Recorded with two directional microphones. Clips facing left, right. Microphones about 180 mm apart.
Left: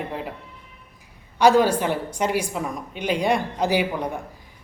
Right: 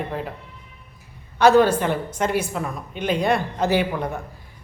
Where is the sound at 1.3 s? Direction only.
10° left (ahead or behind).